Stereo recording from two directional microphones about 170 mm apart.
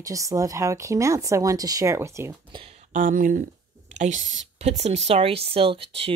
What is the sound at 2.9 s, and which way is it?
Speech, 50° right (ahead or behind).